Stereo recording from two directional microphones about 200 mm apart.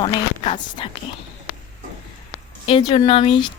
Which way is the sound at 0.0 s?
25° left (ahead or behind).